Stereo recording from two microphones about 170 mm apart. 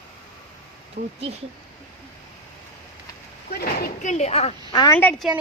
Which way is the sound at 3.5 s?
65° left (ahead or behind).